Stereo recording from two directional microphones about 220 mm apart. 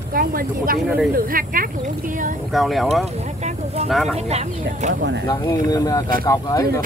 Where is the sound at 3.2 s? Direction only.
30° right (ahead or behind).